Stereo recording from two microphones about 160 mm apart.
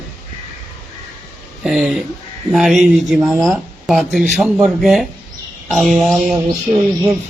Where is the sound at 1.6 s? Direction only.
5° right (ahead or behind).